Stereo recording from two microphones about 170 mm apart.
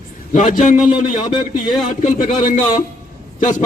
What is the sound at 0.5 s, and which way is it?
A man's voice, 50° left (ahead or behind).